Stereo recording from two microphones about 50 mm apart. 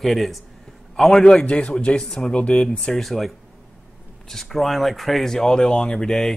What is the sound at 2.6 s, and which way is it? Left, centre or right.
Speech, centre.